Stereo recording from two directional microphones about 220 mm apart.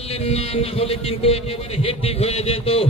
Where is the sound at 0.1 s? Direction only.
25° left (ahead or behind).